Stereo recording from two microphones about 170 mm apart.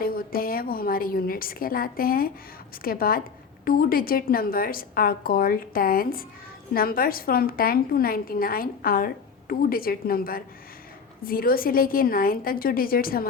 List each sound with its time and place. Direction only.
0.0 s a woman's voice: 60° left (ahead or behind)